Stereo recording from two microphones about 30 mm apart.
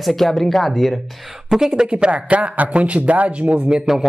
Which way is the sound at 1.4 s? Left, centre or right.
Centre.